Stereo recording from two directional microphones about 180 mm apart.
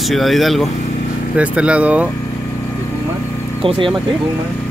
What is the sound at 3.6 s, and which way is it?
Speech, 30° right (ahead or behind).